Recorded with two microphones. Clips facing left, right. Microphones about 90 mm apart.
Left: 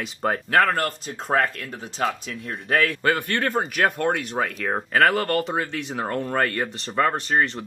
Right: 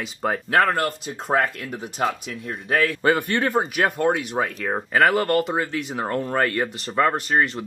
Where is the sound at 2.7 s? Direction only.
10° right (ahead or behind).